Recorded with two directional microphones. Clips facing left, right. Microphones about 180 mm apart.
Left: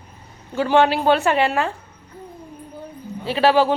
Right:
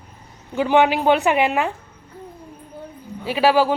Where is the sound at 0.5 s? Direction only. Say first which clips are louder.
Even; 15° right (ahead or behind).